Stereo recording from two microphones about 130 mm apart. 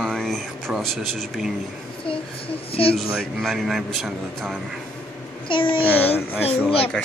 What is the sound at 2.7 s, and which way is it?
Speech, 45° left (ahead or behind).